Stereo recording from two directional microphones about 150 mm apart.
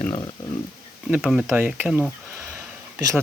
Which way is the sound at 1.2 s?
Centre (ahead or behind).